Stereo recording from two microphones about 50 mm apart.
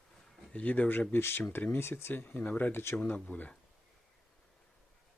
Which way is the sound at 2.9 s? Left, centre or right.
Left.